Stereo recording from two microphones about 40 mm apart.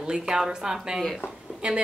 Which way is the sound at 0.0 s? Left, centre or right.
Centre.